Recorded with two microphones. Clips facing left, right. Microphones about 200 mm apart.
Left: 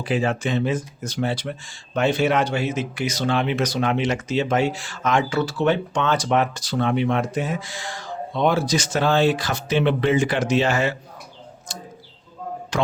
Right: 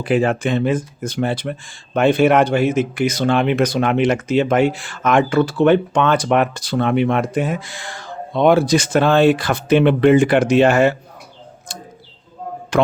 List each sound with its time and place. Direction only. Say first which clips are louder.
0.0 s speech: right 5 dB; 55° right (ahead or behind)
11.7 s tick: right 2 dB; 55° right (ahead or behind)
12.7 s a sound: right 7 dB; 60° right (ahead or behind)